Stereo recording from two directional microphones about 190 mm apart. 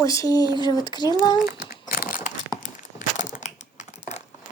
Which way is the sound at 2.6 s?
40° left (ahead or behind).